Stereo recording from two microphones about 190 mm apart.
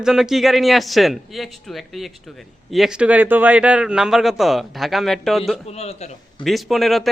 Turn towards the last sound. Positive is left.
turn(degrees=0)  # may be behind; listen again after turning